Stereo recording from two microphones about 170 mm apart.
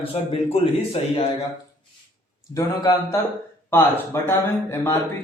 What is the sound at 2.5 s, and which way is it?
A man's voice, 20° left (ahead or behind).